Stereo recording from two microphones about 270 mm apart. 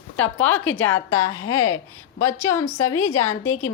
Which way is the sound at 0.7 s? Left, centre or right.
Centre.